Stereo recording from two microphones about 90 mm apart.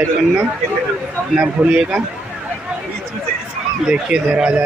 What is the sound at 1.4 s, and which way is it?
Speech, 15° right (ahead or behind).